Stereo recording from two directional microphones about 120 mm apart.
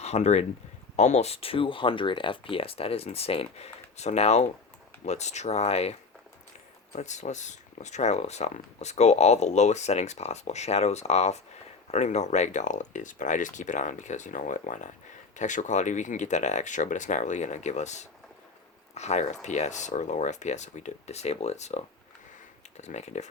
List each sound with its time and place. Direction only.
0.0 s speech: 65° left (ahead or behind)
6.9 s speech: 80° left